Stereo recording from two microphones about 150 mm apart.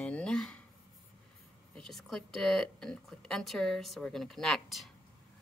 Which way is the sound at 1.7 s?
Centre (ahead or behind).